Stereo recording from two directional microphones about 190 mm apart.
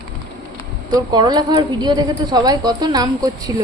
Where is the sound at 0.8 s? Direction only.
20° right (ahead or behind).